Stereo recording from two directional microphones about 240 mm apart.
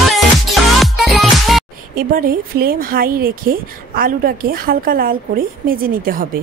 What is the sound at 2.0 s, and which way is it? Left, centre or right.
Speech, right.